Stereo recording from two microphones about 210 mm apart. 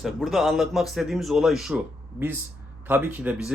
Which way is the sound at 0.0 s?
Centre (ahead or behind).